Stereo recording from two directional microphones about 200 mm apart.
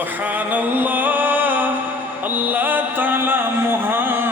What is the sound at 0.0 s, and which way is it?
Music, 10° right (ahead or behind).